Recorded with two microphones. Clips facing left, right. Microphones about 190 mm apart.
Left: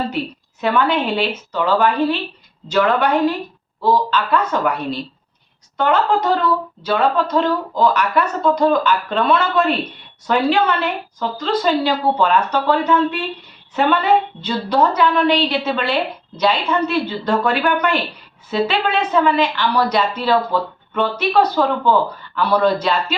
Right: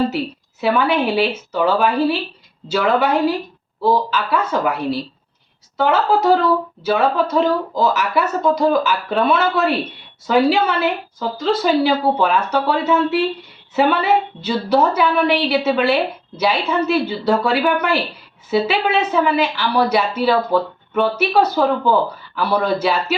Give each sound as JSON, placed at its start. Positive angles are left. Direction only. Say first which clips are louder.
{"t": 0.6, "sound": "a woman's voice", "louder": "right 1 dB", "side_deg": -5}